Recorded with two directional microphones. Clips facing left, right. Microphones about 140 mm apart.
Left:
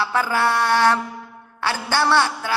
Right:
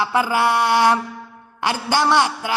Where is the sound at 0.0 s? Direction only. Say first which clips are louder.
Right 2 dB; 15° right (ahead or behind).